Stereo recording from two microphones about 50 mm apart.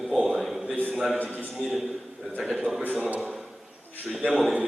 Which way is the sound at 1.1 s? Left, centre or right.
Left.